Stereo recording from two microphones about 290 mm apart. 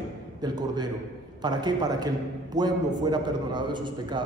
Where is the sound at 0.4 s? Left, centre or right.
Centre.